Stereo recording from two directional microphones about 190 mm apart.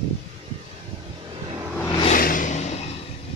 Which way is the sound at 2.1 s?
45° left (ahead or behind).